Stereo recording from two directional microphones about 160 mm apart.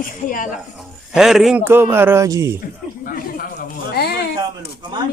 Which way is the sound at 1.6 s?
15° right (ahead or behind).